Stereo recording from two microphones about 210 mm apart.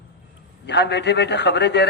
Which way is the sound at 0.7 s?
55° left (ahead or behind).